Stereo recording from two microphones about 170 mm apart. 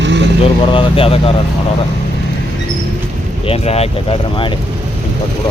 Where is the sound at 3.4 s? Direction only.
35° left (ahead or behind).